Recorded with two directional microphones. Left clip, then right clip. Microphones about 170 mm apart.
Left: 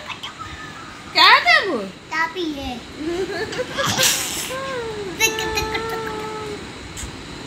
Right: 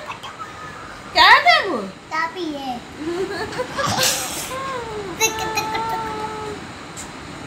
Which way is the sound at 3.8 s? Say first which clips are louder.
Left 1 dB; 5° right (ahead or behind).